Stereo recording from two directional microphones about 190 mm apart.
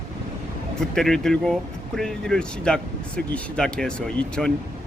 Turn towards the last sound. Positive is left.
turn(degrees=5)  # may be behind; listen again after turning